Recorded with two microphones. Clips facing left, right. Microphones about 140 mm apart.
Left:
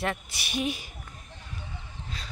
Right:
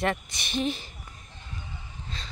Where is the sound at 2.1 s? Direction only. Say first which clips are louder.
Right 1 dB; 10° left (ahead or behind).